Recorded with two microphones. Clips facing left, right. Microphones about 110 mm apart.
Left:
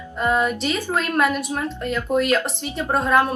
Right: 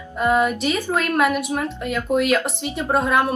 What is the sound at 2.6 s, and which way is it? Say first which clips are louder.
Speech: right 1 dB; 15° right (ahead or behind).